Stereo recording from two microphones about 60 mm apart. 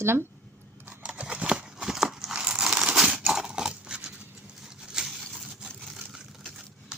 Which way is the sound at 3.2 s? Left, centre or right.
Centre.